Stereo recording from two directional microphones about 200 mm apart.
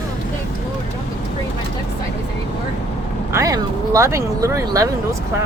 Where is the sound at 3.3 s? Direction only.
15° right (ahead or behind).